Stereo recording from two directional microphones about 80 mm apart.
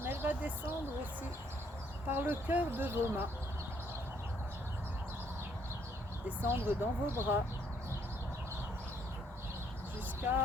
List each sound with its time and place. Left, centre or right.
0.0 s a sound: right
2.0 s speech: right
6.2 s speech: right